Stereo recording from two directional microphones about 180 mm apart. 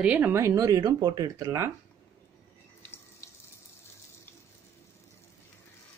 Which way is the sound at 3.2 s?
15° left (ahead or behind).